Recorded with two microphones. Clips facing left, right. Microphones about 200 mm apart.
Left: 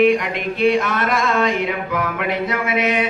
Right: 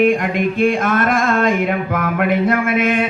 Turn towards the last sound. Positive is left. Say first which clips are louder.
# right 3 dB
turn(degrees=-50)  # may be behind; listen again after turning